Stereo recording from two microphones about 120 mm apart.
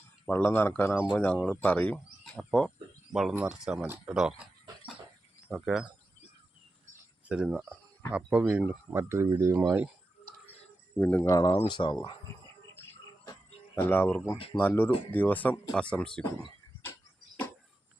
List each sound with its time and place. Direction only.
0.3 s speech: 15° left (ahead or behind)
3.1 s speech: 5° right (ahead or behind)
5.5 s speech: 5° right (ahead or behind)
7.3 s speech: 10° right (ahead or behind)
11.0 s speech: 20° left (ahead or behind)
11.5 s speech: 45° left (ahead or behind)
13.7 s speech: 15° left (ahead or behind)